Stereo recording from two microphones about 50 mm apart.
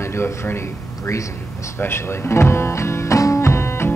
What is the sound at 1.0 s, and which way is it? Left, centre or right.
Speech, left.